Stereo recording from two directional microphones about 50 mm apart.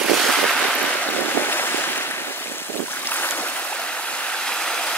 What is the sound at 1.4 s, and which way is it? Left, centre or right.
Stream, left.